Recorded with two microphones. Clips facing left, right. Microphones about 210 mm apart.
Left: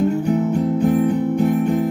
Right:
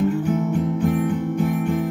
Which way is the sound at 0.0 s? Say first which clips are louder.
Left 3 dB; 40° left (ahead or behind).